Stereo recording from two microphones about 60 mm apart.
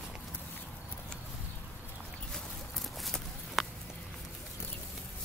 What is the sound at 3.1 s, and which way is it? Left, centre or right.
Walk, centre.